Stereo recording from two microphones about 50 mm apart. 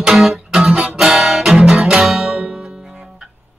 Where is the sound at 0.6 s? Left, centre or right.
Centre.